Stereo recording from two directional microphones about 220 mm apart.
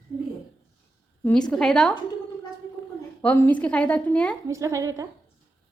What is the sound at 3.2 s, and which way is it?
Child singing, 5° left (ahead or behind).